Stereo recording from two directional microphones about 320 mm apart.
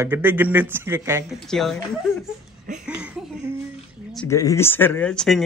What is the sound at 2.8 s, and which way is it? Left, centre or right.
Speech, centre.